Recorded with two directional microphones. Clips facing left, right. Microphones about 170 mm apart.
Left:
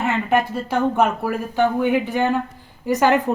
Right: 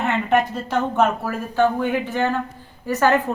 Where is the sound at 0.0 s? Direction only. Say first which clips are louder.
Even; 5° left (ahead or behind).